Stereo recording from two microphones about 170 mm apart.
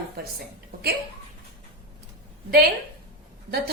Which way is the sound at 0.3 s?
65° right (ahead or behind).